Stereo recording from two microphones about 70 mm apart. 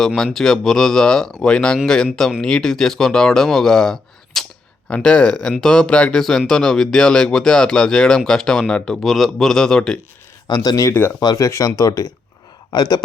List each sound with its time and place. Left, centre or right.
0.3 s speech: centre
10.4 s speech: left
11.4 s speech: left